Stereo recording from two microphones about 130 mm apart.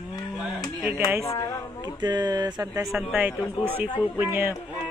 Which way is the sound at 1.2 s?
25° left (ahead or behind).